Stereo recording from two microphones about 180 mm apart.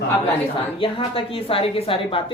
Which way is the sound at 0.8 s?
30° left (ahead or behind).